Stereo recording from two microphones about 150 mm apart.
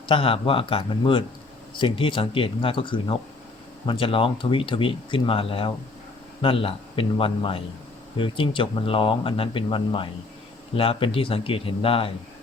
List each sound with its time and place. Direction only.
0.1 s speech: 35° left (ahead or behind)